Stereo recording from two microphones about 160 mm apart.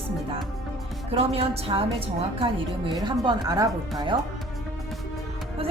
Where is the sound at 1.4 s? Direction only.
35° right (ahead or behind).